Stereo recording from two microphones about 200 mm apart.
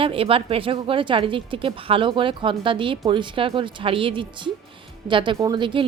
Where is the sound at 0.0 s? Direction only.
25° right (ahead or behind).